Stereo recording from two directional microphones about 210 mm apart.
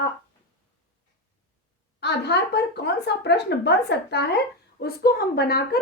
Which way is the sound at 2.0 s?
55° left (ahead or behind).